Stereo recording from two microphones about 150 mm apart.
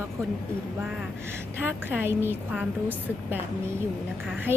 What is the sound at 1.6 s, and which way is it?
Speech, 15° right (ahead or behind).